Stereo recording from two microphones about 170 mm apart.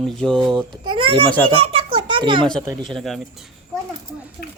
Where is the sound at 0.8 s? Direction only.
30° right (ahead or behind).